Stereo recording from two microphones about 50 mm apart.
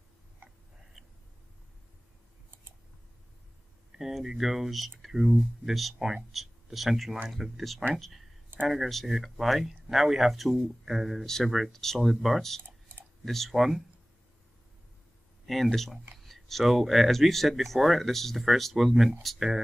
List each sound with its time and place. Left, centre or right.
4.0 s speech: centre
12.6 s clicking: right
13.2 s speech: centre
15.4 s speech: centre